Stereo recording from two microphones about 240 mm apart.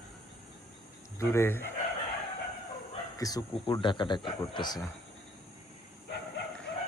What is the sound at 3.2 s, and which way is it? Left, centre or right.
Speech, centre.